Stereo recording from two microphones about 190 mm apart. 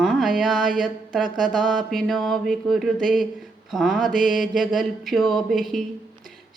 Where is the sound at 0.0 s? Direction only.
Centre (ahead or behind).